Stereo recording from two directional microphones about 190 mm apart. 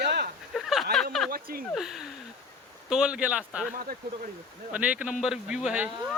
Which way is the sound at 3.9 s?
50° right (ahead or behind).